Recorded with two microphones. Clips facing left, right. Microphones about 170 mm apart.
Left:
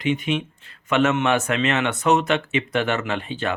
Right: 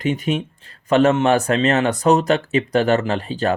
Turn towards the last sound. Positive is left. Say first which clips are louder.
# right 5 dB
turn(degrees=-40)  # may be behind; listen again after turning